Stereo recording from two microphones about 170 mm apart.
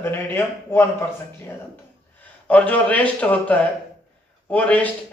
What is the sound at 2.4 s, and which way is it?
A man's voice, 10° left (ahead or behind).